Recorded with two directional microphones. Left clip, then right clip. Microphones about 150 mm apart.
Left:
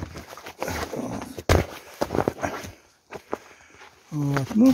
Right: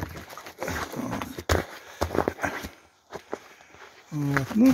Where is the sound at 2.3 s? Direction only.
10° left (ahead or behind).